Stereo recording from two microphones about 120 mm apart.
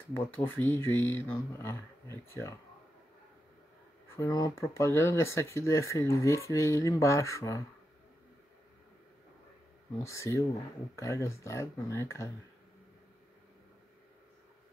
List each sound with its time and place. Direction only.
0.1 s speech: 20° left (ahead or behind)
4.2 s speech: 30° left (ahead or behind)
10.0 s speech: 25° left (ahead or behind)